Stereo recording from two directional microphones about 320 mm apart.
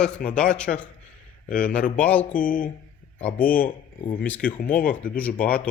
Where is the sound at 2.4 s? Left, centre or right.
Left.